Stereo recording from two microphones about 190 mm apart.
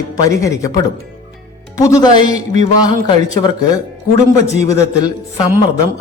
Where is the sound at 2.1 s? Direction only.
35° right (ahead or behind).